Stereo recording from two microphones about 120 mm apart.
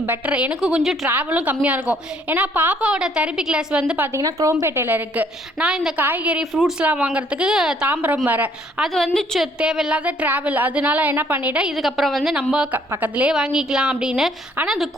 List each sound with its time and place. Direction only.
0.0 s a woman's voice: 15° right (ahead or behind)
4.2 s a woman's voice: 30° right (ahead or behind)
8.8 s a woman's voice: 5° left (ahead or behind)